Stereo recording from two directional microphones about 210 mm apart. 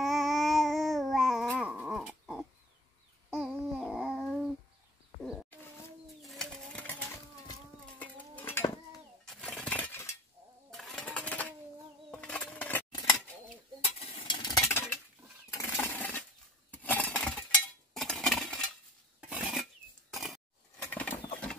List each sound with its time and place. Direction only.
0.0 s babbling: centre (ahead or behind)
4.1 s a sound: centre (ahead or behind)
5.2 s wild animals: 5° left (ahead or behind)
6.2 s sewing machine: centre (ahead or behind)
8.0 s cutlery: 10° left (ahead or behind)
9.2 s chink: centre (ahead or behind)
10.7 s sewing machine: centre (ahead or behind)
12.1 s a sound: 5° left (ahead or behind)
13.9 s a sound: 20° left (ahead or behind)
16.7 s cutlery: 10° left (ahead or behind)
17.9 s coin: centre (ahead or behind)
19.2 s dishes: 5° right (ahead or behind)
20.1 s a sound: centre (ahead or behind)